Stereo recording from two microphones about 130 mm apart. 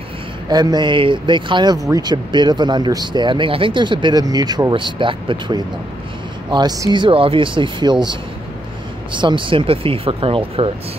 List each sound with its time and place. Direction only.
0.5 s speech: 30° right (ahead or behind)
9.2 s speech: 40° right (ahead or behind)